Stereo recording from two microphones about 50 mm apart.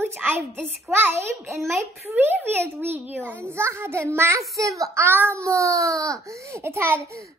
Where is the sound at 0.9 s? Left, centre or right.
Right.